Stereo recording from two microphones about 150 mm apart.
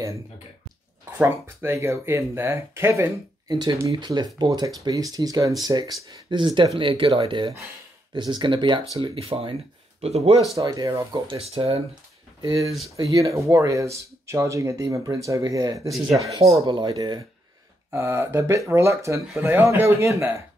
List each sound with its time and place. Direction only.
1.1 s speech: 15° right (ahead or behind)
3.4 s speech: 30° right (ahead or behind)
10.6 s speech: 25° right (ahead or behind)
11.1 s speech: 40° right (ahead or behind)
12.4 s speech: 25° right (ahead or behind)
17.9 s speech: 15° right (ahead or behind)